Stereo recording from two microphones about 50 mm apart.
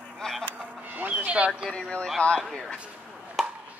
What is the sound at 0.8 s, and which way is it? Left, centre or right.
Music, right.